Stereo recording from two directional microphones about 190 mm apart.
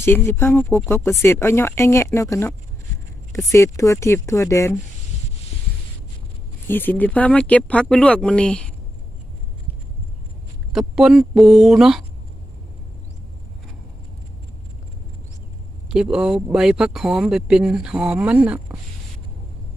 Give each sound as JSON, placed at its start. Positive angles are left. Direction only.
{"t": 0.0, "sound": "speech", "side_deg": 10}
{"t": 6.7, "sound": "speech", "side_deg": 10}
{"t": 10.7, "sound": "speech", "side_deg": 0}
{"t": 15.9, "sound": "speech", "side_deg": -5}